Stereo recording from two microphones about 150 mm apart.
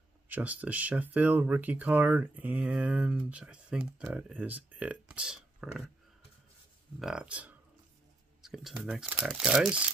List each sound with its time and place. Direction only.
0.3 s speech: 10° right (ahead or behind)
7.0 s speech: 5° right (ahead or behind)
8.4 s a sound: centre (ahead or behind)
8.8 s speech: 5° right (ahead or behind)